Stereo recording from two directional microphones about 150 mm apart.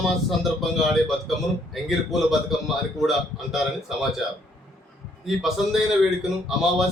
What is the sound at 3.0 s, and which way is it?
Speech, centre (ahead or behind).